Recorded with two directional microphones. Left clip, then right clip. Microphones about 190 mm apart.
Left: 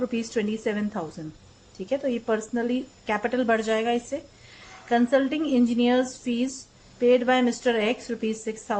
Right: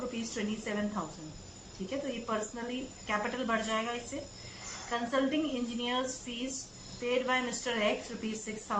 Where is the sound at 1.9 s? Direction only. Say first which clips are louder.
Left 10 dB; 45° left (ahead or behind).